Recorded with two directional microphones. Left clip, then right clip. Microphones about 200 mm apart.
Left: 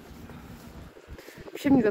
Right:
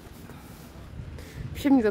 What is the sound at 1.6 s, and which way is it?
Speech, 20° right (ahead or behind).